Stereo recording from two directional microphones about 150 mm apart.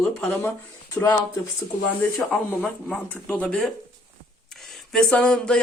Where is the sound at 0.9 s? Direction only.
25° left (ahead or behind).